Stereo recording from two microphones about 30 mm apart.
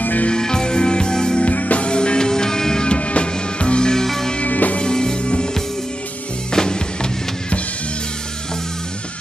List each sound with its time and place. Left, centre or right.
0.3 s music: left
1.4 s music: left
1.9 s music: left
2.9 s music: left
3.9 s music: centre
4.5 s music: left
4.9 s music: left
6.5 s music: left